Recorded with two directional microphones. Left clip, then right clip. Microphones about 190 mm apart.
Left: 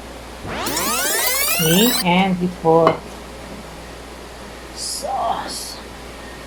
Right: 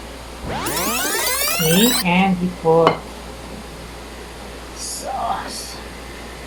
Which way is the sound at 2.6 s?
25° left (ahead or behind).